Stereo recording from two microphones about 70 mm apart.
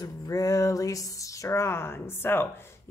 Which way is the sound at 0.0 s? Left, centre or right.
Left.